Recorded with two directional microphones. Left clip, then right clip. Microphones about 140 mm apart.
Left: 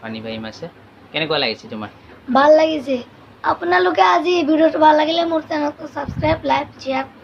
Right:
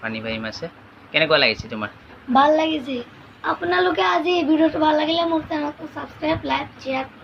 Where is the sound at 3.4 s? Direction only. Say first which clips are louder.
Left 4 dB; 35° left (ahead or behind).